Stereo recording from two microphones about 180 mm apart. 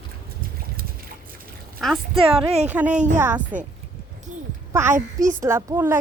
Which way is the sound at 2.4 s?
10° right (ahead or behind).